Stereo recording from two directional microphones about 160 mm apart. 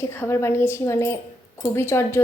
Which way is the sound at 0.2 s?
15° left (ahead or behind).